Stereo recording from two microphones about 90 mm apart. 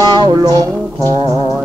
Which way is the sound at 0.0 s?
55° right (ahead or behind).